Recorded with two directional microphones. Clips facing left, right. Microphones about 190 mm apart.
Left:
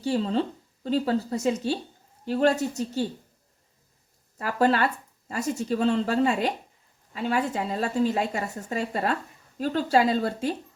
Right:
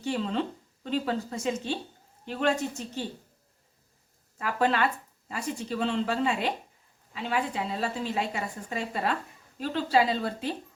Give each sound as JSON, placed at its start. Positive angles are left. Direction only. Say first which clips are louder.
{"t": 0.0, "sound": "speech", "louder": "left 4 dB", "side_deg": 35}
{"t": 4.4, "sound": "a woman's voice", "louder": "left 3 dB", "side_deg": 40}